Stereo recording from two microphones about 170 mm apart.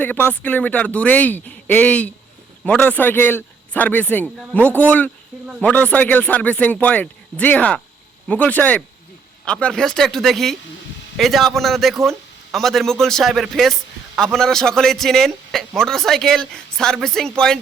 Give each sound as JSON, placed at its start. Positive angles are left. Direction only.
{"t": 0.0, "sound": "a man's voice", "side_deg": 10}